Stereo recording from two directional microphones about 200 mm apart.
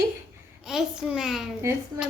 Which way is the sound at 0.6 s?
5° right (ahead or behind).